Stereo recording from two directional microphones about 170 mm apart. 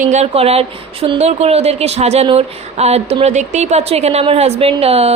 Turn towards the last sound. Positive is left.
turn(degrees=-35)  # may be behind; listen again after turning